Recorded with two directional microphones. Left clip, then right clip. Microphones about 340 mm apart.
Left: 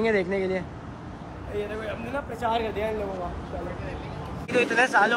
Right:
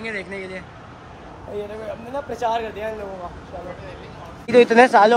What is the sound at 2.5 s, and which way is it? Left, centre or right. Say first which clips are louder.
Speech: right 2 dB; centre.